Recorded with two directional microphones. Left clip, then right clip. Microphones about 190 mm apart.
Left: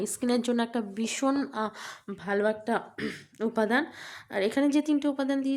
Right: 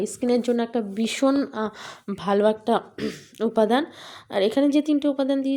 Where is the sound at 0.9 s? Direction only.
25° right (ahead or behind).